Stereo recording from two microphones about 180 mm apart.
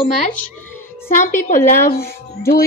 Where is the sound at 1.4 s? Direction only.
50° left (ahead or behind).